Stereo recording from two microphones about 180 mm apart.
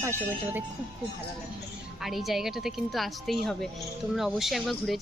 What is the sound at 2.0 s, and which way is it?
Speech, centre (ahead or behind).